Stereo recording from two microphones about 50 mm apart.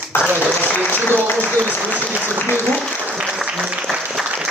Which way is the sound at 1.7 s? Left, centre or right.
Right.